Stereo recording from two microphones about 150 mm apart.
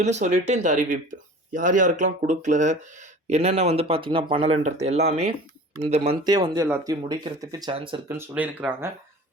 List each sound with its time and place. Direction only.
0.0 s speech: 50° right (ahead or behind)
6.0 s speech: 30° right (ahead or behind)
8.0 s speech: 15° right (ahead or behind)